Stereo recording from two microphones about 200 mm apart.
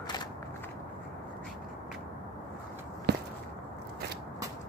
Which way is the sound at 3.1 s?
55° right (ahead or behind).